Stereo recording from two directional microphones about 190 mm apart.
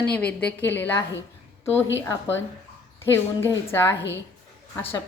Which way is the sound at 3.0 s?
15° left (ahead or behind).